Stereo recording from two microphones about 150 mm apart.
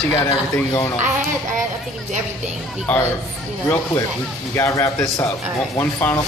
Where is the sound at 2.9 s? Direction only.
10° left (ahead or behind).